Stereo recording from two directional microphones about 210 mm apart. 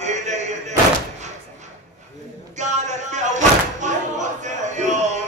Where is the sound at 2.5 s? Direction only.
35° right (ahead or behind).